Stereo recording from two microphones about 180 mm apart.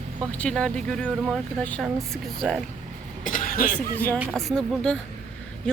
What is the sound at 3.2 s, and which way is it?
Cough, 50° left (ahead or behind).